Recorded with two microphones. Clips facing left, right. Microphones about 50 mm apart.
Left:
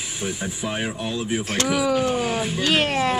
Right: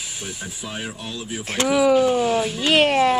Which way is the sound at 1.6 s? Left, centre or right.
Right.